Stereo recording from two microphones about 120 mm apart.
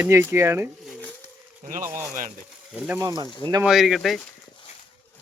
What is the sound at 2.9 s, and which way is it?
Speech, 30° right (ahead or behind).